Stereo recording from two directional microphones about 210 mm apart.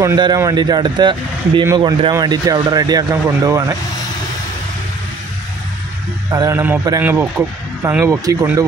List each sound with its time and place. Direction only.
0.0 s speech: 15° right (ahead or behind)
6.3 s speech: 15° right (ahead or behind)